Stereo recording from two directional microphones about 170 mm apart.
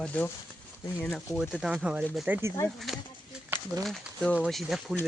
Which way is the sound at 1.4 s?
5° right (ahead or behind).